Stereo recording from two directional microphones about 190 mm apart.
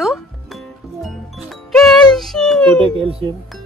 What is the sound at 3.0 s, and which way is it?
Speech, 30° right (ahead or behind).